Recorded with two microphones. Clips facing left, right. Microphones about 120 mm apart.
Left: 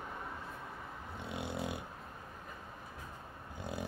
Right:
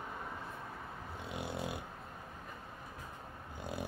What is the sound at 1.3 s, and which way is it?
Snoring, 25° left (ahead or behind).